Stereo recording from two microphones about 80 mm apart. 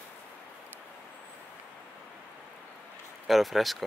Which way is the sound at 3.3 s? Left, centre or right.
Centre.